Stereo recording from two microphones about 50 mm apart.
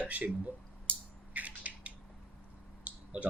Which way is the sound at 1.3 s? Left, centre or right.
Right.